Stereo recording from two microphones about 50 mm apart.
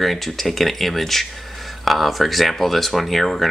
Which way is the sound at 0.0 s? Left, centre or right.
Centre.